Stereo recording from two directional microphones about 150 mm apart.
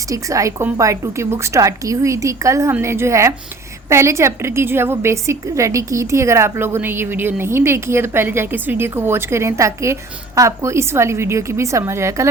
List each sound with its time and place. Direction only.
0.1 s a woman's voice: 20° right (ahead or behind)